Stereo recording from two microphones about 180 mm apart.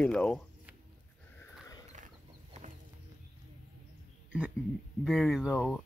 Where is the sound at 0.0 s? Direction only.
5° left (ahead or behind).